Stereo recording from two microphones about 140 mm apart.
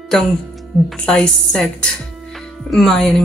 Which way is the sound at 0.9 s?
5° left (ahead or behind).